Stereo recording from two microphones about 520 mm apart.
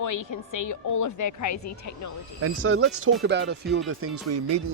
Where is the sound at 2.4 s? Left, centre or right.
Right.